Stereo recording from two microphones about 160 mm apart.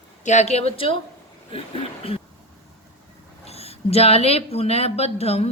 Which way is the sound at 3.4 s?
40° left (ahead or behind).